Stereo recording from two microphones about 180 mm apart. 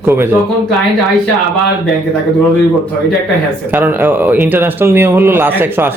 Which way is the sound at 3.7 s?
10° right (ahead or behind).